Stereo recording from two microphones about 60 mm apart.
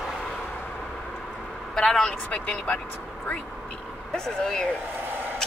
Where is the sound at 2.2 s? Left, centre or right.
Left.